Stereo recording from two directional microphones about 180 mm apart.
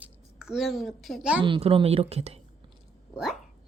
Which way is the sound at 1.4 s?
30° right (ahead or behind).